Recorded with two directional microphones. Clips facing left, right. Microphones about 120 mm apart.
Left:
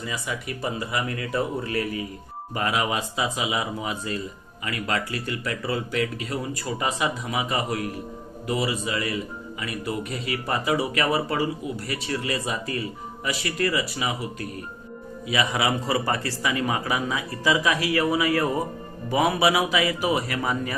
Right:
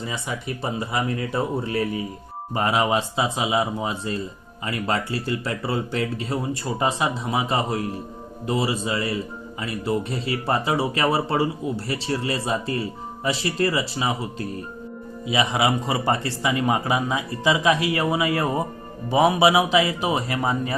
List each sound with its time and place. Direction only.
0.0 s speech: 25° right (ahead or behind)